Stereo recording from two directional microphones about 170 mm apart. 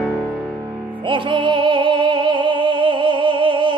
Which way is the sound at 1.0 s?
30° right (ahead or behind).